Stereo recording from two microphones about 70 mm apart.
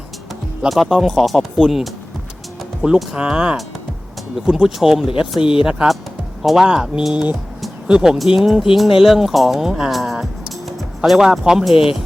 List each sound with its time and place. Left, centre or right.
0.7 s speech: centre